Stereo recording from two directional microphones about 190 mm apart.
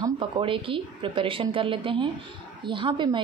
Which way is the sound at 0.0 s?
25° right (ahead or behind).